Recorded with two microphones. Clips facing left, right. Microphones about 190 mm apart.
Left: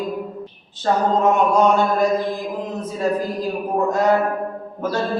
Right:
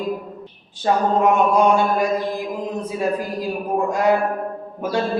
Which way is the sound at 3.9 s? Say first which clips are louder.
Left 1 dB; 10° right (ahead or behind).